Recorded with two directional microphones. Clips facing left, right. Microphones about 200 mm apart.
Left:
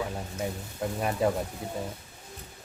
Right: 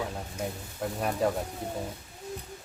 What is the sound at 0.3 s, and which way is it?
Speech, centre (ahead or behind).